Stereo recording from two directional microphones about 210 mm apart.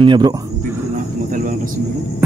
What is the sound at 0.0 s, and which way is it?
Speech, 20° right (ahead or behind).